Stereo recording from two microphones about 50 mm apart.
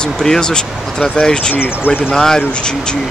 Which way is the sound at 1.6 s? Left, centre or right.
Left.